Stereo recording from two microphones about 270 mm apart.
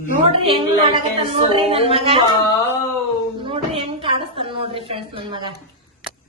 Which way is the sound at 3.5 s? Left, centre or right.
Centre.